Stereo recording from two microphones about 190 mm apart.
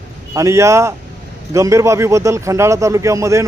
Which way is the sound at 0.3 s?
15° right (ahead or behind).